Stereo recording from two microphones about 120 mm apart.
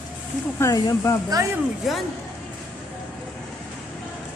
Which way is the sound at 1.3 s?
30° right (ahead or behind).